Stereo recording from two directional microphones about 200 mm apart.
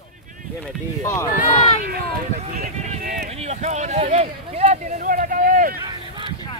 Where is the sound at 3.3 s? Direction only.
30° right (ahead or behind).